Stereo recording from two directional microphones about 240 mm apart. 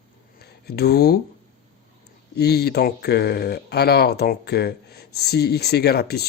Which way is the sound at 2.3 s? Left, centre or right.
Left.